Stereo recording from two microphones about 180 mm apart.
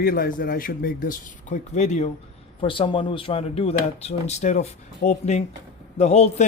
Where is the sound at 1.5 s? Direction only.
40° left (ahead or behind).